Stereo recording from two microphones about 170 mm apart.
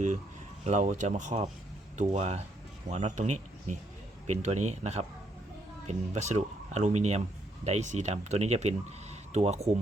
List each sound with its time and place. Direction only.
0.6 s speech: 45° right (ahead or behind)